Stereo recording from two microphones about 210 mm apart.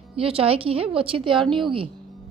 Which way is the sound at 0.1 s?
25° right (ahead or behind).